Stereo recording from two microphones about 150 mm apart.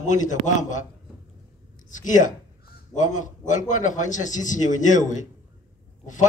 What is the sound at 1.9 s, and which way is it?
Crow, 55° left (ahead or behind).